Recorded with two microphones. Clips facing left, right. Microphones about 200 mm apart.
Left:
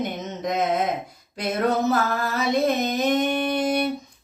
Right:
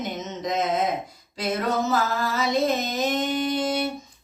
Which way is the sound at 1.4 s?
60° left (ahead or behind).